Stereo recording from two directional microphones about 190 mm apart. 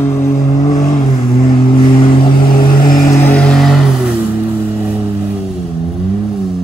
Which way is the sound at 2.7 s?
45° left (ahead or behind).